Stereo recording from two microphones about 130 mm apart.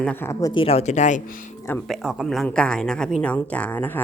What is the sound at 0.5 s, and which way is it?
Speech, 45° left (ahead or behind).